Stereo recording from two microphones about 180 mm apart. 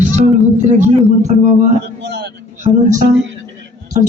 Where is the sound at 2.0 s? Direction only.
65° right (ahead or behind).